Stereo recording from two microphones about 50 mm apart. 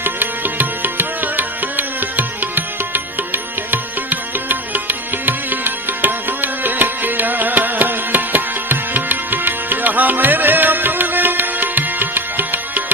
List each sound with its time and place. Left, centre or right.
0.0 s music: right